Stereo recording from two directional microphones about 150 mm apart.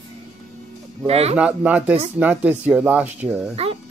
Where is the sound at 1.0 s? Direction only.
45° right (ahead or behind).